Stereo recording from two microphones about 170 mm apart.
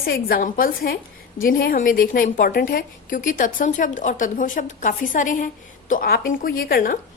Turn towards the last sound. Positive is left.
turn(degrees=60)  # may be behind; listen again after turning